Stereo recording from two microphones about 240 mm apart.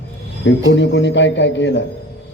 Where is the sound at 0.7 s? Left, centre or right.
Left.